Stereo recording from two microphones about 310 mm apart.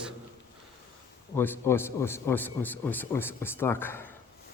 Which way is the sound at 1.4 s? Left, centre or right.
Centre.